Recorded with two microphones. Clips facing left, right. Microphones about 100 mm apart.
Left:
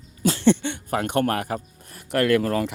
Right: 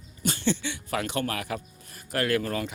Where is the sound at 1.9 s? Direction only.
60° left (ahead or behind).